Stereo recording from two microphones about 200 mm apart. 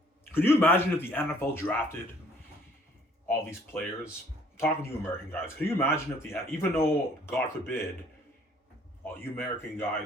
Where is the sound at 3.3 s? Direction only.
10° left (ahead or behind).